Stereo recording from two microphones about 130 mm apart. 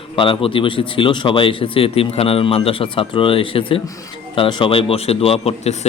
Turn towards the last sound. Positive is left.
turn(degrees=55)  # may be behind; listen again after turning